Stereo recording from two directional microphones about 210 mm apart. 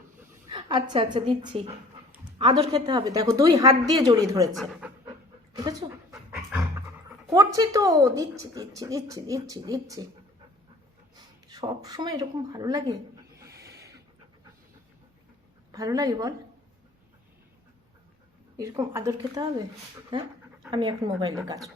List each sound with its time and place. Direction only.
0.5 s speech: 25° right (ahead or behind)
4.5 s speech: centre (ahead or behind)
5.5 s speech: 15° right (ahead or behind)
6.3 s dog: 5° right (ahead or behind)
7.3 s speech: 15° right (ahead or behind)
11.4 s speech: 20° right (ahead or behind)
15.7 s speech: 15° right (ahead or behind)
18.6 s speech: 15° right (ahead or behind)
20.7 s speech: 20° right (ahead or behind)